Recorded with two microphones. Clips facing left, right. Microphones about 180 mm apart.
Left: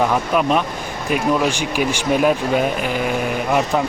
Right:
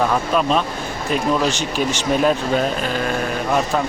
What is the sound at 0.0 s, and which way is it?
Speech, 10° left (ahead or behind).